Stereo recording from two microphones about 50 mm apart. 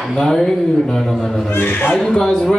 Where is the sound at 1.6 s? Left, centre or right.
Left.